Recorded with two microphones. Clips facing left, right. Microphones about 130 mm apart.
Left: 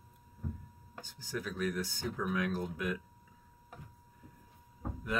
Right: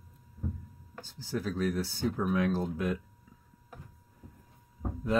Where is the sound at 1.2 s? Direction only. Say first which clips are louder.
Right 5 dB; 35° right (ahead or behind).